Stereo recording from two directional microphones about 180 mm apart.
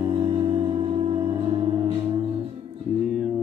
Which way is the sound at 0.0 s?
30° right (ahead or behind).